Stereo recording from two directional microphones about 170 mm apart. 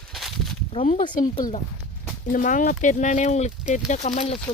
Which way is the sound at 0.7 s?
35° left (ahead or behind).